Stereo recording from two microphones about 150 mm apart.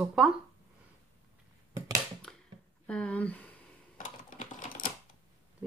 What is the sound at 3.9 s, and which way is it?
Typing, 60° left (ahead or behind).